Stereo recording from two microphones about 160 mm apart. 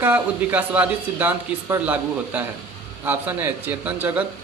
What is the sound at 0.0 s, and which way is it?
Speech, 10° right (ahead or behind).